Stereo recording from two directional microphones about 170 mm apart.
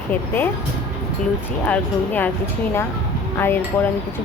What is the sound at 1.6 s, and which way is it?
Speech, 10° left (ahead or behind).